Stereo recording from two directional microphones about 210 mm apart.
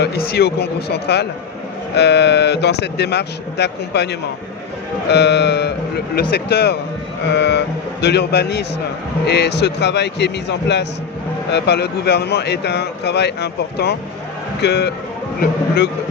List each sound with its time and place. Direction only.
0.0 s speech: 50° left (ahead or behind)